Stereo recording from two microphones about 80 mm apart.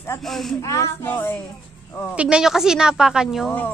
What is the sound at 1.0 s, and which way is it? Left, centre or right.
Speech, left.